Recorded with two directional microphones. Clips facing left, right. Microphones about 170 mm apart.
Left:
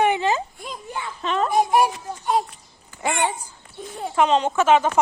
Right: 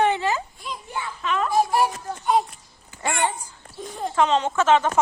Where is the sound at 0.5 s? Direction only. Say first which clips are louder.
Even; 45° left (ahead or behind).